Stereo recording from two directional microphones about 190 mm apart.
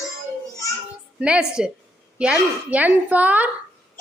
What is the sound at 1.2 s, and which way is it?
A woman's voice, 5° right (ahead or behind).